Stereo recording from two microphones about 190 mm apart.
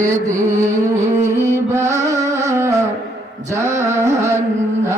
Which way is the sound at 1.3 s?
15° right (ahead or behind).